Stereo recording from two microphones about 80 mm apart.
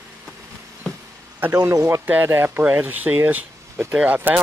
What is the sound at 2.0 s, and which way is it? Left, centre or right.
Speech, right.